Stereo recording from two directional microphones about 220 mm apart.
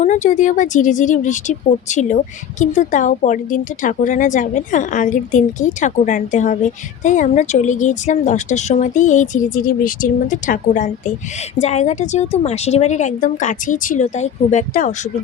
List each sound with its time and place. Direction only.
0.0 s a woman's voice: 35° left (ahead or behind)